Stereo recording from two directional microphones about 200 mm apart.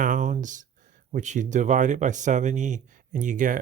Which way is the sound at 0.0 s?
40° right (ahead or behind).